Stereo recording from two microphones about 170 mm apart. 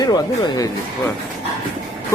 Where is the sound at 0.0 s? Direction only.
25° left (ahead or behind).